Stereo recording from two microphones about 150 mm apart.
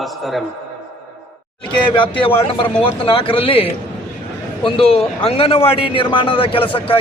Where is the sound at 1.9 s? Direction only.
35° left (ahead or behind).